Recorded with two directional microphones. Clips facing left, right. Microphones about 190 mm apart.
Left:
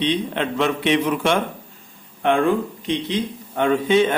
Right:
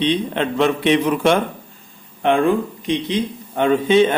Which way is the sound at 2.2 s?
20° right (ahead or behind).